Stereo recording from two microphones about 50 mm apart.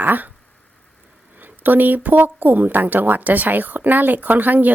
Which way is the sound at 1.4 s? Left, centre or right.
Right.